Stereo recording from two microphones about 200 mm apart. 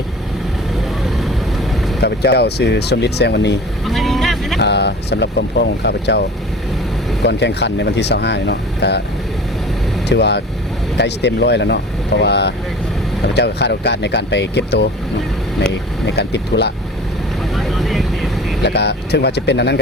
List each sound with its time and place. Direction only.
2.0 s speech: 55° left (ahead or behind)
3.8 s vehicle: centre (ahead or behind)
4.6 s speech: 60° left (ahead or behind)
7.3 s speech: 60° left (ahead or behind)
10.1 s speech: 60° left (ahead or behind)
16.0 s speech: 55° left (ahead or behind)
17.5 s vehicle: centre (ahead or behind)
18.6 s speech: 55° left (ahead or behind)